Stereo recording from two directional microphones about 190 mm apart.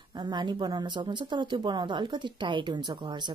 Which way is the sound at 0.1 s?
25° right (ahead or behind).